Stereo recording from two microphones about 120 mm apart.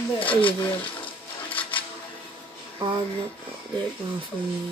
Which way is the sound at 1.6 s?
45° left (ahead or behind).